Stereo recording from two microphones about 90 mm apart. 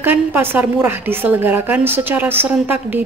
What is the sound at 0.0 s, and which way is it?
A woman's voice, 20° right (ahead or behind).